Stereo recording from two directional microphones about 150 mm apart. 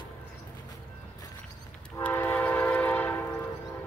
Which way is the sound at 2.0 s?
10° left (ahead or behind).